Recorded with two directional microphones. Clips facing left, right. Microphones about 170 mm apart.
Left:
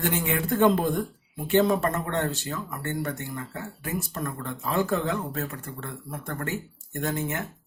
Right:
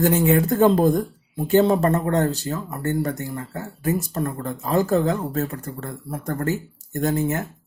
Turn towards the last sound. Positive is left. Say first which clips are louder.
# right 7 dB
turn(degrees=-35)  # may be behind; listen again after turning